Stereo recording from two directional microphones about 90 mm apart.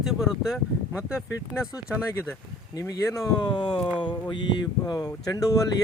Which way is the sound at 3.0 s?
35° left (ahead or behind).